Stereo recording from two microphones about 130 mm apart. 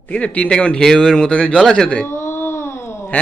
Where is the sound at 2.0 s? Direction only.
20° left (ahead or behind).